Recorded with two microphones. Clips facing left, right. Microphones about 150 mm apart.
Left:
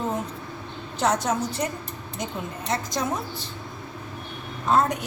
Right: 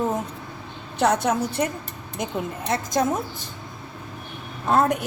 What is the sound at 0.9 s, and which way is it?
Speech, 60° right (ahead or behind).